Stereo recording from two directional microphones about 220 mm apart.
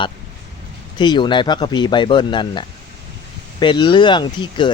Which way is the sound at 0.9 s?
20° left (ahead or behind).